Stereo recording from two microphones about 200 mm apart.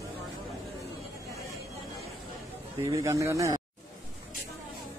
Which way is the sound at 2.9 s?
15° right (ahead or behind).